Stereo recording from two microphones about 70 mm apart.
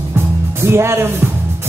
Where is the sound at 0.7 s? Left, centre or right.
Right.